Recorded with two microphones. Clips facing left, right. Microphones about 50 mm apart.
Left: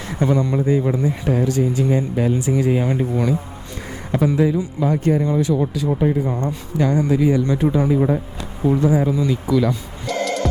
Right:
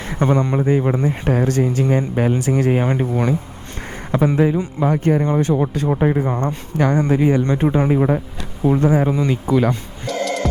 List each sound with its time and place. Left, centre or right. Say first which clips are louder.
0.0 s speech: right 1 dB; right
7.9 s speech: right 1 dB; right
8.6 s speech: right 1 dB; right
10.1 s music: even; centre